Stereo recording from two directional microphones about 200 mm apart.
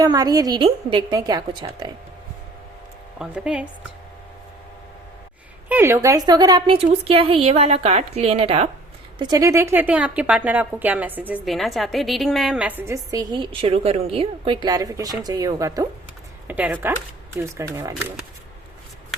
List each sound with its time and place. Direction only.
0.0 s a woman's voice: 20° right (ahead or behind)
3.2 s speech: 5° right (ahead or behind)
5.6 s a woman's voice: 10° right (ahead or behind)